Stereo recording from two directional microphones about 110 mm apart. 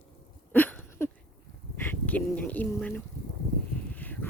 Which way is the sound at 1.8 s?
15° left (ahead or behind).